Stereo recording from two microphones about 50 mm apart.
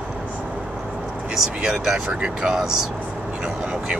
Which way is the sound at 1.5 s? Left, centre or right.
Centre.